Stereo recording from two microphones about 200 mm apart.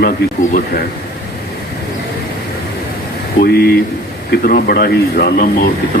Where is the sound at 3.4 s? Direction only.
55° left (ahead or behind).